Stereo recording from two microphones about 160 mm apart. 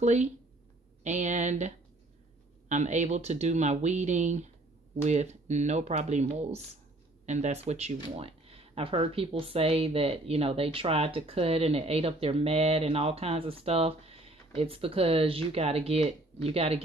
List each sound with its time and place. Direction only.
0.0 s speech: 45° right (ahead or behind)
2.7 s speech: 45° right (ahead or behind)